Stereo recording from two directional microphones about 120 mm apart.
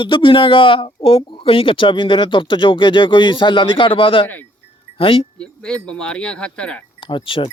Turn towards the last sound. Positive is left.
turn(degrees=45)  # may be behind; listen again after turning